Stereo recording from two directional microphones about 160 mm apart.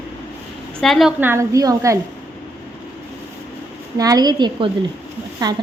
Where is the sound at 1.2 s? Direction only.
15° right (ahead or behind).